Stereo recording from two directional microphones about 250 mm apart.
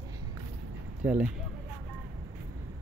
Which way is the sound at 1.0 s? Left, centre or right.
Centre.